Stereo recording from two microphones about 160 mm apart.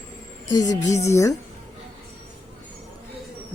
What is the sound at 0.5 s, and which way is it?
Speech, 25° left (ahead or behind).